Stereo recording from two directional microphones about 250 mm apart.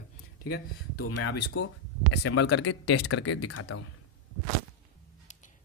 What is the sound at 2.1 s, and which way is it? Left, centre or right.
Speech, left.